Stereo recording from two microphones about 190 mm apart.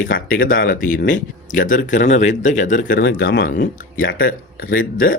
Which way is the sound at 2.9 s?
65° left (ahead or behind).